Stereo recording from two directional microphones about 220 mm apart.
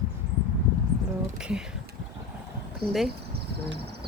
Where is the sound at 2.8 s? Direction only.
Centre (ahead or behind).